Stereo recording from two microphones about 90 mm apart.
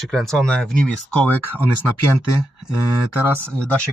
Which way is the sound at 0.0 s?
5° left (ahead or behind).